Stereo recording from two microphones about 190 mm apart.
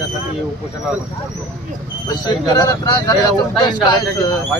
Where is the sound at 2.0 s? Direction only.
20° left (ahead or behind).